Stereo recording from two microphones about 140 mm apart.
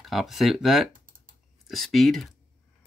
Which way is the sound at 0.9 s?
80° right.